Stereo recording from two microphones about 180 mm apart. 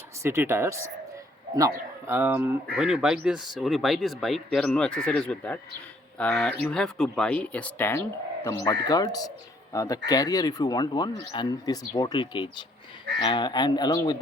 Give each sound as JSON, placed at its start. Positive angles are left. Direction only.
{"t": 0.2, "sound": "a man's voice", "side_deg": -15}